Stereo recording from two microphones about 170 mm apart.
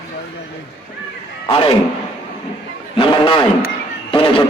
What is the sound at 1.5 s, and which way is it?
Speech, 35° left (ahead or behind).